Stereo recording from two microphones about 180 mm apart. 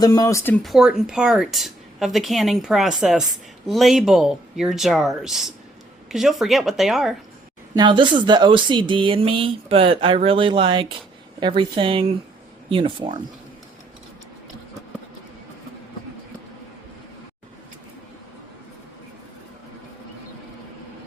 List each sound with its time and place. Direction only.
0.0 s speech: 20° left (ahead or behind)
0.6 s speech: centre (ahead or behind)
7.8 s speech: 25° right (ahead or behind)